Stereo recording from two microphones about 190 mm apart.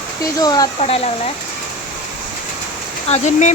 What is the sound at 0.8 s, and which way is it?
Speech, 30° left (ahead or behind).